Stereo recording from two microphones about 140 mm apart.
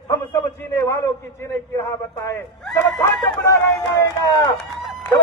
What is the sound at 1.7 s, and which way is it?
Speech, 20° left (ahead or behind).